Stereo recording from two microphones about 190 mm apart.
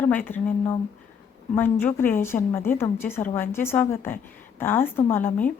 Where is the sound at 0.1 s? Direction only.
10° left (ahead or behind).